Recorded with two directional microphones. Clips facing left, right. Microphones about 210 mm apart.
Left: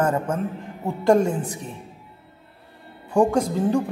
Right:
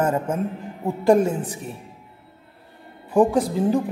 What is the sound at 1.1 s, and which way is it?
Speech, 5° right (ahead or behind).